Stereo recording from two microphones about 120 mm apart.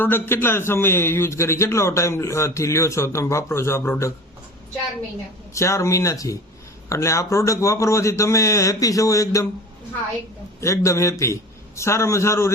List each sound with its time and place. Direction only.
0.0 s a man's voice: 15° left (ahead or behind)
5.5 s a man's voice: 25° left (ahead or behind)
10.6 s a man's voice: 25° left (ahead or behind)